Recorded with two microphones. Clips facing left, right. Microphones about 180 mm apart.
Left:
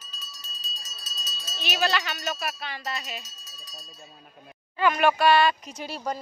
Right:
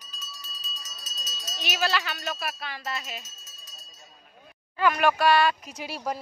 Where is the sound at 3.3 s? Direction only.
35° left (ahead or behind).